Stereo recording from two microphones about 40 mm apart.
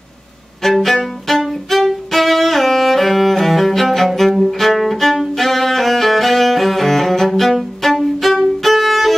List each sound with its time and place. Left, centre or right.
0.7 s music: centre
7.2 s violin: centre